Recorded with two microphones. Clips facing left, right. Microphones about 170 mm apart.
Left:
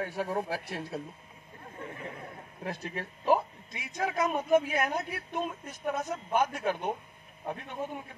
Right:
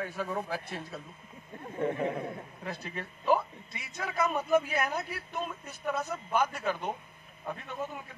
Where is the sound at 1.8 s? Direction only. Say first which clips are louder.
Right 12 dB; 70° right (ahead or behind).